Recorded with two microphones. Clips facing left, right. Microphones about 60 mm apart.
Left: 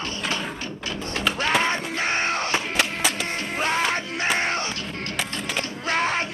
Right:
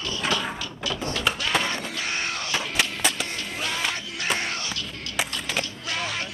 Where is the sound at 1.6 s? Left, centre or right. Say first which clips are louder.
Left 5 dB; left.